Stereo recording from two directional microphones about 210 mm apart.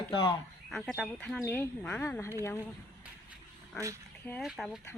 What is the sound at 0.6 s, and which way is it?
Speech, centre (ahead or behind).